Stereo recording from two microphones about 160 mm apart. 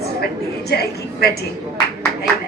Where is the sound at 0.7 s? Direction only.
80° left.